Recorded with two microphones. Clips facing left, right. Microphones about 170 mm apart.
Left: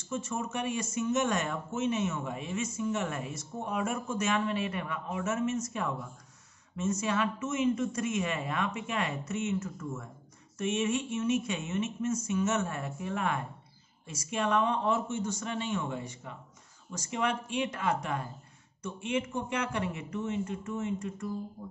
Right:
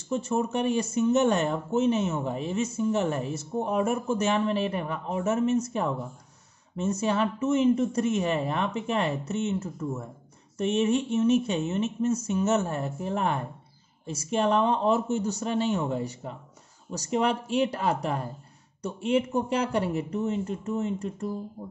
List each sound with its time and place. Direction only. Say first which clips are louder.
0.1 s speech: right 7 dB; 35° right (ahead or behind)